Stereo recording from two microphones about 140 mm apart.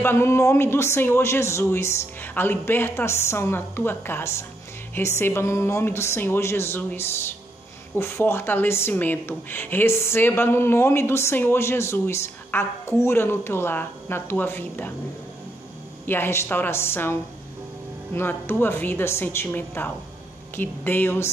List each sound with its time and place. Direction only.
0.0 s a man's voice: 15° left (ahead or behind)
16.1 s a man's voice: 15° left (ahead or behind)